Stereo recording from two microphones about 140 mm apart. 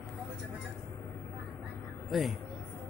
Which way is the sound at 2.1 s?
Centre (ahead or behind).